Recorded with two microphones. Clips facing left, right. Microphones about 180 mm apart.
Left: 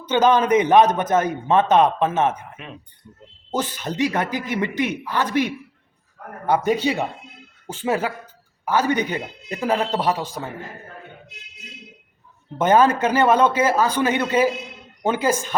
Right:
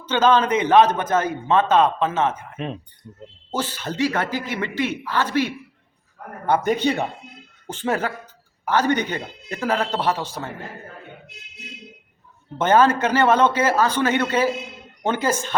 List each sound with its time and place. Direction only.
0.0 s a man's voice: 15° left (ahead or behind)
2.6 s speech: 35° right (ahead or behind)
3.5 s a man's voice: 15° left (ahead or behind)
12.5 s a man's voice: 15° left (ahead or behind)